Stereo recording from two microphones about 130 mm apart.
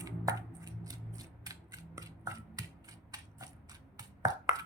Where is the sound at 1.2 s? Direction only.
25° right (ahead or behind).